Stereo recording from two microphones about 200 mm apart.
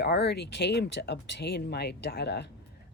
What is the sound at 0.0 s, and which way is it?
Speech, 55° left (ahead or behind).